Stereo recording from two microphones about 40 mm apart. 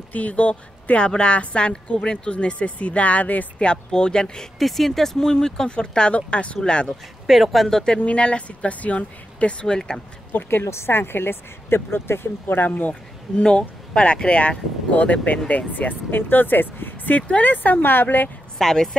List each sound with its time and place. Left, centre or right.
0.1 s speech: left
3.5 s speech: left
4.6 s speech: centre
5.7 s speech: left
7.2 s speech: centre
8.0 s speech: left
9.7 s speech: centre
10.5 s speech: left
13.4 s speech: left
18.6 s speech: centre